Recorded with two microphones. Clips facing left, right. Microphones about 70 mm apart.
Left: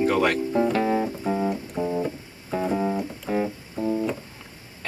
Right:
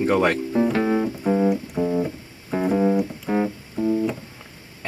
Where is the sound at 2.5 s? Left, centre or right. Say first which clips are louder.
Right 3 dB; right.